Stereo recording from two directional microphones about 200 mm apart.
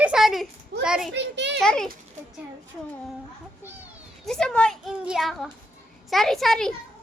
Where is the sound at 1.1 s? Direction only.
60° right (ahead or behind).